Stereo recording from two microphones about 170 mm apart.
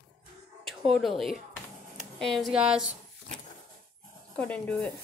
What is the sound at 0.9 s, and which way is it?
Speech, centre (ahead or behind).